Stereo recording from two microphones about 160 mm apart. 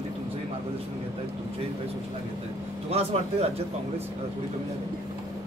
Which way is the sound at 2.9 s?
40° right (ahead or behind).